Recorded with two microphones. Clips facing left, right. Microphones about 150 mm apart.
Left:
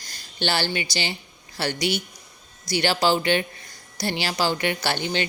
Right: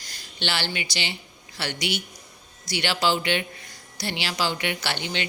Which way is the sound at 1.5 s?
40° left (ahead or behind).